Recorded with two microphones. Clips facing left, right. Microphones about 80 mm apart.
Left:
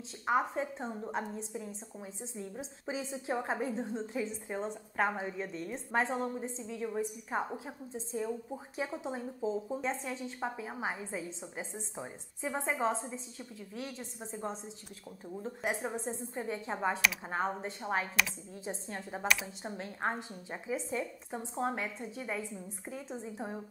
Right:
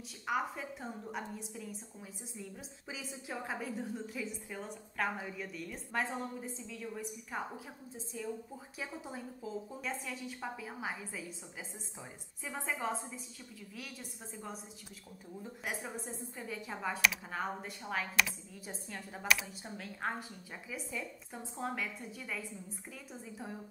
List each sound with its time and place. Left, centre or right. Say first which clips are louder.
0.3 s a woman's voice: left 5 dB; left
19.2 s speech: even; centre
19.6 s a woman's voice: left 4 dB; left